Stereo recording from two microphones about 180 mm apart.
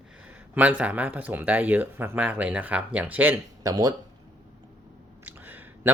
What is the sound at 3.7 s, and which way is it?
Speech, 20° right (ahead or behind).